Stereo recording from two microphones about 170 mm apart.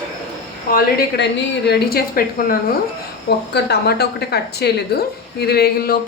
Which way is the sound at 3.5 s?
70° left (ahead or behind).